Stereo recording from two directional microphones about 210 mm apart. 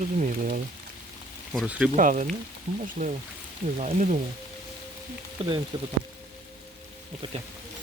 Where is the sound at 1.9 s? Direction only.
35° right (ahead or behind).